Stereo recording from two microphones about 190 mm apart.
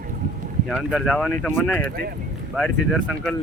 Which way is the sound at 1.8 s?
50° right (ahead or behind).